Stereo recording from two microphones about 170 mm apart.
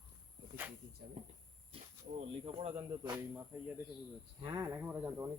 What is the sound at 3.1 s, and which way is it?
Speech, 10° right (ahead or behind).